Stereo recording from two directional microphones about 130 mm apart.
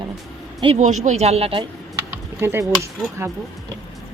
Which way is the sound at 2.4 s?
20° right (ahead or behind).